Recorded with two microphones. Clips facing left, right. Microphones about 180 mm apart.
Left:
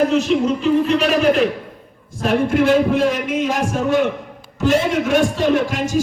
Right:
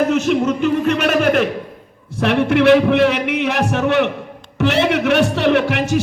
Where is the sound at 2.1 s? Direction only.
70° right (ahead or behind).